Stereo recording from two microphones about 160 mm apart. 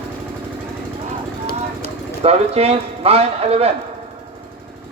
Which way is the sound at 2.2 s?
40° right (ahead or behind).